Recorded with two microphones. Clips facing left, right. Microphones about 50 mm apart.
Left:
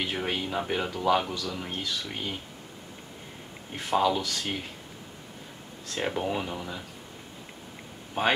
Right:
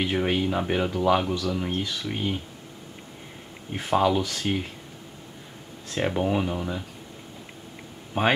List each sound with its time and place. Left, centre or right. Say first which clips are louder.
0.0 s speech: right 6 dB; centre
3.7 s speech: right 3 dB; centre
5.9 s speech: right 5 dB; centre
8.2 s speech: right 3 dB; centre